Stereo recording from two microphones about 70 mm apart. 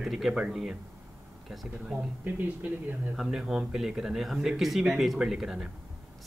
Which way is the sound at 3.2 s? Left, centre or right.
Centre.